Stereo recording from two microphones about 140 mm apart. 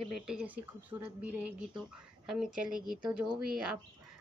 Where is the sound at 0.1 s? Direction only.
5° right (ahead or behind).